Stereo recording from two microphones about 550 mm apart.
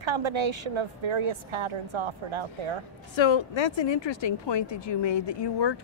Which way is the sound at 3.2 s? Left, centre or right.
Left.